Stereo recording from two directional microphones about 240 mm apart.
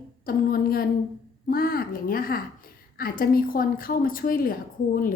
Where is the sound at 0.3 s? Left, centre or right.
Left.